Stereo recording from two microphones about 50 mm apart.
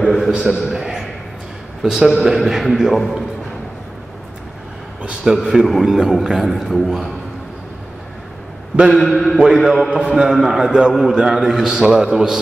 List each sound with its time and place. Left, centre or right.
0.0 s a man's voice: centre
0.7 s a sound: centre
1.8 s a man's voice: centre
5.2 s a man's voice: centre
8.9 s a man's voice: centre
9.5 s a man's voice: centre
9.9 s a man's voice: centre